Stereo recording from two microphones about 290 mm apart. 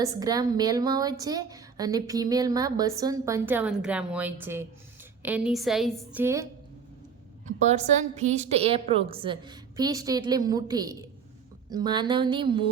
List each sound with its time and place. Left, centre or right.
0.0 s a woman's voice: centre
7.4 s a woman's voice: right